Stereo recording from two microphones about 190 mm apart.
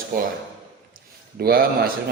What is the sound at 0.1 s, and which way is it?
Speech, 45° right (ahead or behind).